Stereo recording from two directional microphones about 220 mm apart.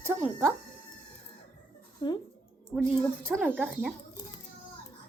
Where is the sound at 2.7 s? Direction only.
5° right (ahead or behind).